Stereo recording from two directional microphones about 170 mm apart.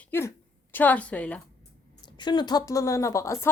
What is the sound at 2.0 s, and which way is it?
Speech, 25° left (ahead or behind).